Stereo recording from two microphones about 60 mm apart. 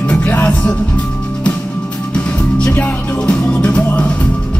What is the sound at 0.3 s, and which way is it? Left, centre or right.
Music, centre.